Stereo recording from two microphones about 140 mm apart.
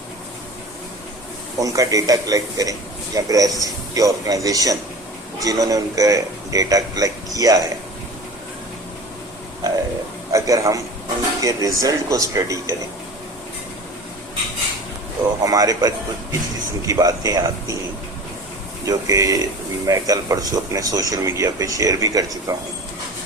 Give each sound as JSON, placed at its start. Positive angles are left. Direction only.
{"t": 1.5, "sound": "speech", "side_deg": -25}
{"t": 10.3, "sound": "speech", "side_deg": -20}
{"t": 15.4, "sound": "speech", "side_deg": -25}
{"t": 18.9, "sound": "speech", "side_deg": -25}